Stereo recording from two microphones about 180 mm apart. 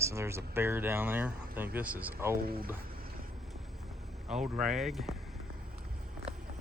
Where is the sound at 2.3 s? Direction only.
55° right (ahead or behind).